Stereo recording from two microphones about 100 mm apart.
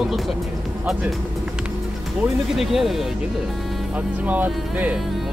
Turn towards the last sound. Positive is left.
turn(degrees=-15)  # may be behind; listen again after turning